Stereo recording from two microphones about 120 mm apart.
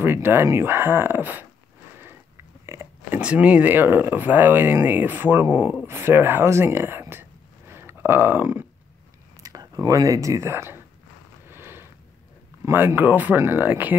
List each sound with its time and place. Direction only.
0.0 s speech: 20° right (ahead or behind)
2.6 s speech: 20° right (ahead or behind)
9.4 s speech: 30° right (ahead or behind)
11.4 s a sound: 20° right (ahead or behind)
12.6 s speech: 20° right (ahead or behind)